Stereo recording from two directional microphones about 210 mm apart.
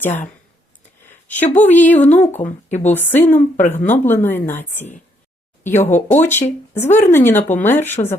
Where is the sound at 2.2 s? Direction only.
30° left (ahead or behind).